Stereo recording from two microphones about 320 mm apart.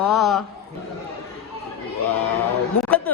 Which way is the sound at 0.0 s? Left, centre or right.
Centre.